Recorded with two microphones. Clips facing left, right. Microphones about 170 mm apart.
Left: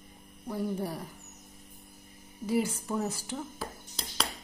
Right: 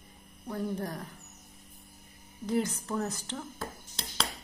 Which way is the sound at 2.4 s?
10° left (ahead or behind).